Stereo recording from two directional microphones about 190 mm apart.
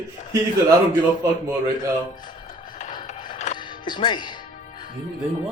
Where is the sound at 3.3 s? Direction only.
40° left (ahead or behind).